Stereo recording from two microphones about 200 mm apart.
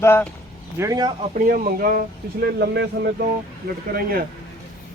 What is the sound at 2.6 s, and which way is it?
Speech, 55° right (ahead or behind).